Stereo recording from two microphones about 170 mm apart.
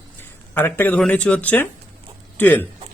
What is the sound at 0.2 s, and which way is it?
Speech, 10° left (ahead or behind).